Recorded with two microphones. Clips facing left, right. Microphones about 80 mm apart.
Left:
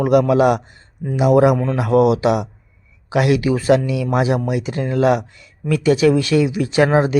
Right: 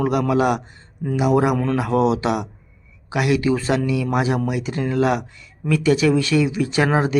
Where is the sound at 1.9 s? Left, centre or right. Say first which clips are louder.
Left 5 dB; right.